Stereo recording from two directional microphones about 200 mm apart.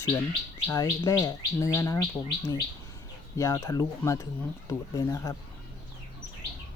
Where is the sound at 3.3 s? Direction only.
15° left (ahead or behind).